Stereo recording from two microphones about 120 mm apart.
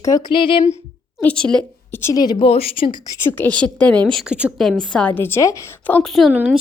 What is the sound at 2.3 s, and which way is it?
Speech, 55° left (ahead or behind).